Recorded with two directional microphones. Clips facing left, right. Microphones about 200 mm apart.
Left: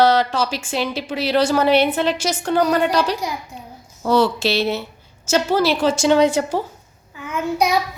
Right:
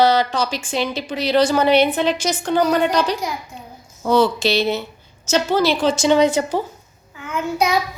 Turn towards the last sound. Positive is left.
turn(degrees=15)  # may be behind; listen again after turning